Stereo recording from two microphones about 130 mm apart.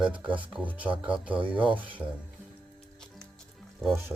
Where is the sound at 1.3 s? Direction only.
40° right (ahead or behind).